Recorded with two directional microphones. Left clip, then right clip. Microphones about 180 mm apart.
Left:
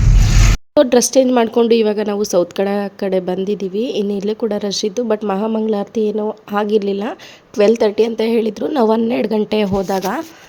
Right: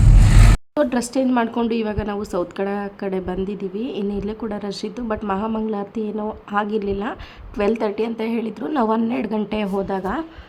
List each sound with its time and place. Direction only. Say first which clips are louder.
0.8 s speech: left 9 dB; 40° left (ahead or behind)